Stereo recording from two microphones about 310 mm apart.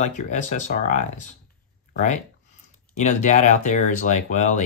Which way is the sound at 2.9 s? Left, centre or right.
Left.